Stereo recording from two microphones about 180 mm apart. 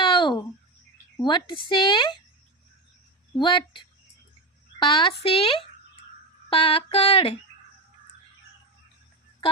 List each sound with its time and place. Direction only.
0.0 s a sound: 25° left (ahead or behind)
1.2 s a woman's voice: 25° left (ahead or behind)
3.3 s a woman's voice: 25° left (ahead or behind)
6.5 s female singing: 30° left (ahead or behind)